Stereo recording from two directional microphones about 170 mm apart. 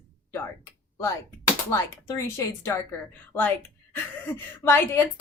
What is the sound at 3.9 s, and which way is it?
A woman's voice, 10° left (ahead or behind).